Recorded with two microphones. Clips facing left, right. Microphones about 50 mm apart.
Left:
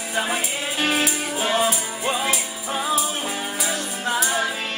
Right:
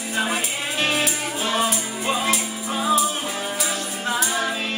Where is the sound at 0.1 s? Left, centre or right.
Centre.